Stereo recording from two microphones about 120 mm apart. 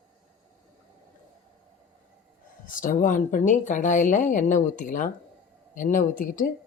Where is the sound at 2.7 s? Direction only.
90° left.